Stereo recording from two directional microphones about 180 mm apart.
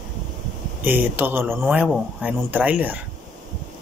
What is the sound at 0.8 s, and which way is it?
Speech, 10° right (ahead or behind).